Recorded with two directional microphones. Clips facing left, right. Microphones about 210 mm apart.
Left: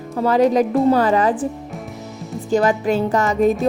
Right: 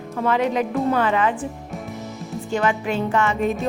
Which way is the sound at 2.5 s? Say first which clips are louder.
Left 6 dB; 40° left (ahead or behind).